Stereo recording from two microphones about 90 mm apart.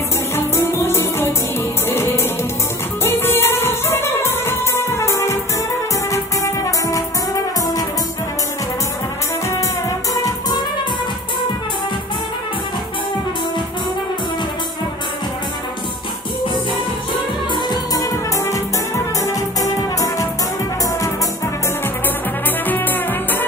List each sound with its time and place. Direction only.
0.4 s music: 30° left (ahead or behind)
9.5 s music: 35° left (ahead or behind)
17.9 s music: 40° left (ahead or behind)
22.7 s music: 20° left (ahead or behind)